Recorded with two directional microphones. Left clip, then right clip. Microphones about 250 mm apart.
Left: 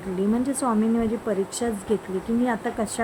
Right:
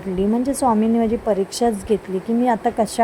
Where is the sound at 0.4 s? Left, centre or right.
Centre.